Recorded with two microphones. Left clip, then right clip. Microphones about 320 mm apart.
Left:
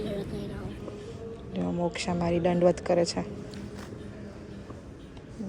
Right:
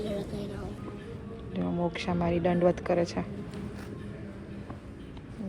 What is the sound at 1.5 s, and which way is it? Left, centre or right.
Speech, centre.